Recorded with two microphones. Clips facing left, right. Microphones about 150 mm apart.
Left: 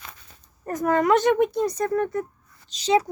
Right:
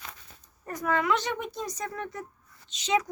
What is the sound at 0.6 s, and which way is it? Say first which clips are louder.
Speech: left 7 dB; 45° left (ahead or behind).